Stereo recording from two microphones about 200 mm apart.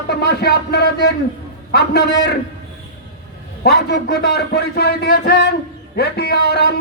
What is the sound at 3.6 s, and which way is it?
A man's voice, 55° left (ahead or behind).